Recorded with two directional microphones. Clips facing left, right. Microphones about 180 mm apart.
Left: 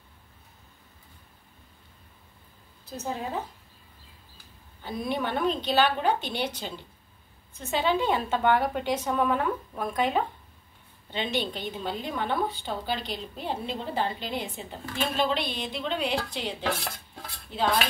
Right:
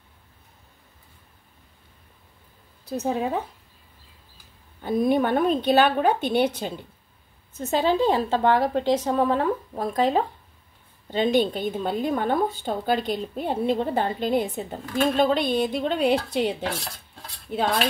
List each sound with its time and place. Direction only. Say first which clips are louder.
3.0 s speech: right 7 dB; 60° right (ahead or behind)
4.8 s a woman's voice: right 9 dB; 50° right (ahead or behind)
7.5 s a woman's voice: right 4 dB; 40° right (ahead or behind)